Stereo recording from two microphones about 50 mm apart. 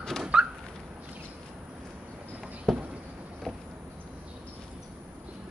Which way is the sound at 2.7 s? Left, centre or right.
Centre.